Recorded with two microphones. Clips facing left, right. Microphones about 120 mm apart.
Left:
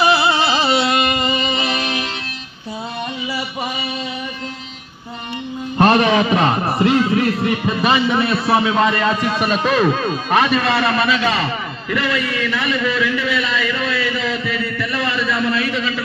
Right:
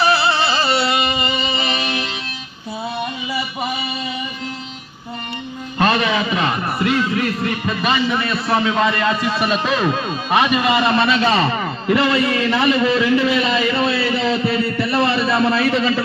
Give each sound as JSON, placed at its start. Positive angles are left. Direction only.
{"t": 0.0, "sound": "carnatic music", "side_deg": 15}
{"t": 0.8, "sound": "music", "side_deg": 0}
{"t": 5.8, "sound": "a man's voice", "side_deg": 50}
{"t": 8.3, "sound": "a man's voice", "side_deg": 5}